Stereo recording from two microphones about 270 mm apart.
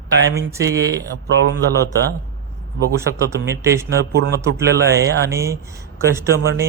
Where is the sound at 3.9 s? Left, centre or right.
Right.